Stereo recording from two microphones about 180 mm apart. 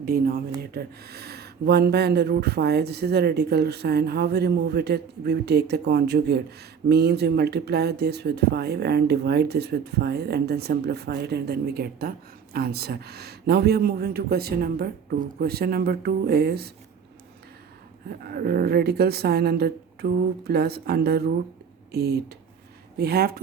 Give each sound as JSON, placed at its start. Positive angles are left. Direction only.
{"t": 0.0, "sound": "speech", "side_deg": -55}
{"t": 18.2, "sound": "speech", "side_deg": -60}